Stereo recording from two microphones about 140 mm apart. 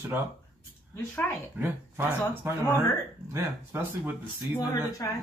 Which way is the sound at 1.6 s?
15° right (ahead or behind).